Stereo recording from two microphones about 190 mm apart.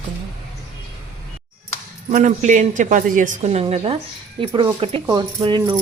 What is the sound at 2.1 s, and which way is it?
A woman's voice, 40° right (ahead or behind).